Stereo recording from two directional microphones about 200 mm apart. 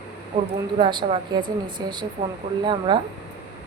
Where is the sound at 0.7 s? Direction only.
25° right (ahead or behind).